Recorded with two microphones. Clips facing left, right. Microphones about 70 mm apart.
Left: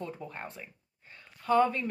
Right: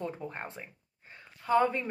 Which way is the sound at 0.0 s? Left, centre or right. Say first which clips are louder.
Right 2 dB; right.